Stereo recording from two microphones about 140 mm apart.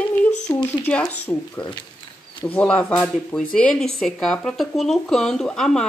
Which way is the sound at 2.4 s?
10° left (ahead or behind).